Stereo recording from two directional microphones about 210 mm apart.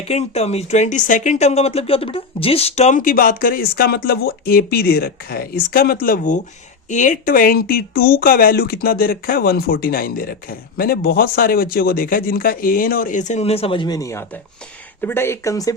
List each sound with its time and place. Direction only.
0.0 s speech: 30° left (ahead or behind)